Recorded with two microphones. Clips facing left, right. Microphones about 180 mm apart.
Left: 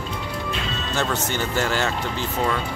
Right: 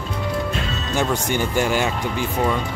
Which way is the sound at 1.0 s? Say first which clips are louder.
Right 4 dB; 15° right (ahead or behind).